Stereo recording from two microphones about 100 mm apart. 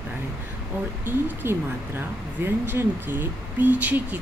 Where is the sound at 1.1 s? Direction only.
20° right (ahead or behind).